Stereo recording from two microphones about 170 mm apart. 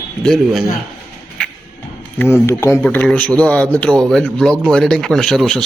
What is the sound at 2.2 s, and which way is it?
A man's voice, 15° left (ahead or behind).